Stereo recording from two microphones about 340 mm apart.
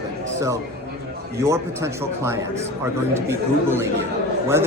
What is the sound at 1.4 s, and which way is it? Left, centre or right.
Speech, centre.